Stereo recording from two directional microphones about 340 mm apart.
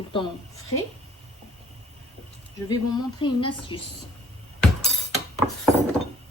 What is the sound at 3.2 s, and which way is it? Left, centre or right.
Speech, centre.